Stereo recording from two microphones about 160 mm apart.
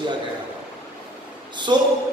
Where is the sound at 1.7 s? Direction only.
30° right (ahead or behind).